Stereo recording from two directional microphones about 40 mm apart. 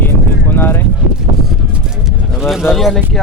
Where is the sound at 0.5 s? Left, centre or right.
Left.